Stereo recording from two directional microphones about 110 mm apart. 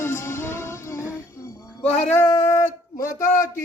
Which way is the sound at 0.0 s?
25° left (ahead or behind).